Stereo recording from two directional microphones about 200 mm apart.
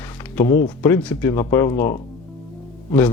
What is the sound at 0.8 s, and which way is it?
Speech, 10° left (ahead or behind).